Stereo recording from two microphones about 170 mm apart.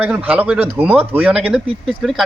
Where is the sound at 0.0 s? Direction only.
10° right (ahead or behind).